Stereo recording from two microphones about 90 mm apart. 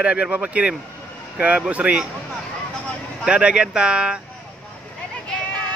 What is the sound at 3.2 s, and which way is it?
Speech, 10° right (ahead or behind).